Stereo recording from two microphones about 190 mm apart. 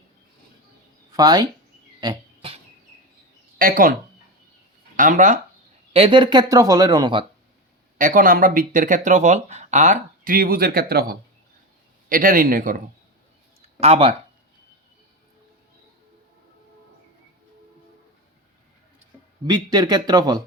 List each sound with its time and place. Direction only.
1.1 s speech: 20° right (ahead or behind)
2.0 s a sound: 25° right (ahead or behind)
3.6 s speech: 45° right (ahead or behind)
4.9 s speech: 40° right (ahead or behind)
5.9 s speech: 25° right (ahead or behind)
7.9 s speech: 45° right (ahead or behind)
13.7 s speech: 30° right (ahead or behind)
19.5 s speech: 20° right (ahead or behind)